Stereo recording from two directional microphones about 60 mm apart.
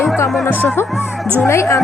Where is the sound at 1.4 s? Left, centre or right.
Left.